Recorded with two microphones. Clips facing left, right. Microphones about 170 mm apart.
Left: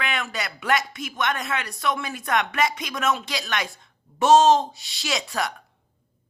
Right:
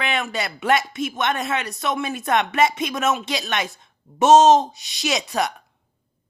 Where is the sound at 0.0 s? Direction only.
25° right (ahead or behind).